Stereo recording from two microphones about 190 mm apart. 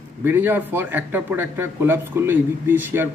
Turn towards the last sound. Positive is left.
turn(degrees=-10)  # may be behind; listen again after turning